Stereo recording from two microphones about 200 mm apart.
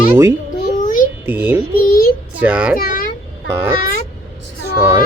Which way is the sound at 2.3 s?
5° right (ahead or behind).